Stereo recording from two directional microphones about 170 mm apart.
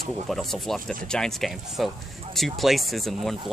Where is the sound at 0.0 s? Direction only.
Centre (ahead or behind).